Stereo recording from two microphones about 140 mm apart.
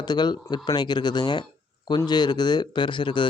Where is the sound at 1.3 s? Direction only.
30° left (ahead or behind).